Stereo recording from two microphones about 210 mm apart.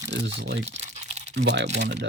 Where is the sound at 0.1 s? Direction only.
60° right (ahead or behind).